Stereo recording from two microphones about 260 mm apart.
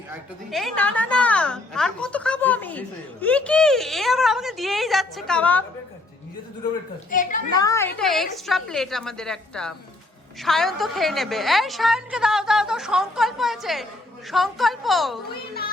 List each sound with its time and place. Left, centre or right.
0.5 s a woman's voice: centre
7.1 s a child's voice: left
7.5 s a woman's voice: centre